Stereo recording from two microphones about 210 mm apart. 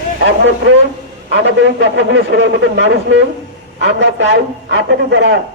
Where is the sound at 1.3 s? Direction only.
60° right (ahead or behind).